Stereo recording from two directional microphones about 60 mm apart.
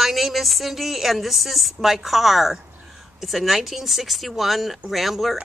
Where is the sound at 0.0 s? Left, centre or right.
Centre.